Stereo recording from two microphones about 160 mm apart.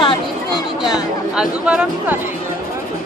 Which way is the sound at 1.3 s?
5° right (ahead or behind).